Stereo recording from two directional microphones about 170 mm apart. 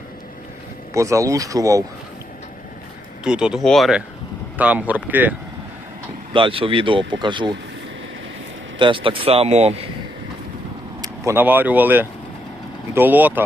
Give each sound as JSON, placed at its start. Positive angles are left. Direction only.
{"t": 0.9, "sound": "speech", "side_deg": -20}
{"t": 3.2, "sound": "speech", "side_deg": -5}
{"t": 6.3, "sound": "speech", "side_deg": -30}
{"t": 8.8, "sound": "speech", "side_deg": -30}
{"t": 11.0, "sound": "speech", "side_deg": -15}